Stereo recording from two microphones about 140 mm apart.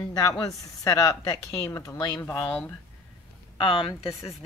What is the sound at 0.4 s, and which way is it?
Speech, 25° left (ahead or behind).